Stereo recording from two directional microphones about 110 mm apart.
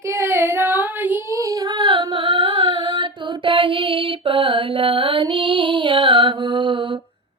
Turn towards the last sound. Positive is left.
turn(degrees=-50)  # may be behind; listen again after turning